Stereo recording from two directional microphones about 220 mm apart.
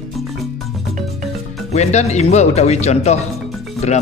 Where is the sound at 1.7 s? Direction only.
30° left (ahead or behind).